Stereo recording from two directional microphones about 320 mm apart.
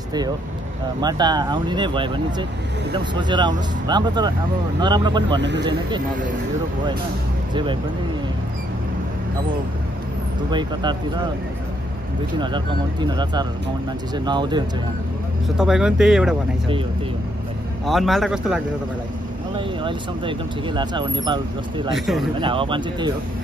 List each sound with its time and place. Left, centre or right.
1.0 s speech: centre
5.4 s speech: right
10.5 s speech: centre
12.4 s speech: centre
15.4 s speech: centre
17.8 s speech: centre
19.5 s speech: centre
21.9 s speech: centre
22.4 s speech: centre